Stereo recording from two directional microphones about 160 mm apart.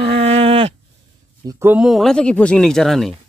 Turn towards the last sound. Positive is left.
turn(degrees=0)  # may be behind; listen again after turning